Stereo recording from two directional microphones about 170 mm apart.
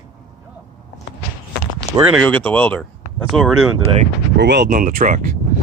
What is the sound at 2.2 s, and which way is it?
Speech, 10° left (ahead or behind).